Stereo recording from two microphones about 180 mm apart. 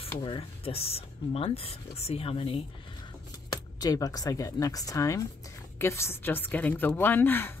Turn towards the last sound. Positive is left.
turn(degrees=10)  # may be behind; listen again after turning